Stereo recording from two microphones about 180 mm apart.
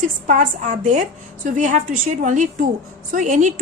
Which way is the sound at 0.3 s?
45° right (ahead or behind).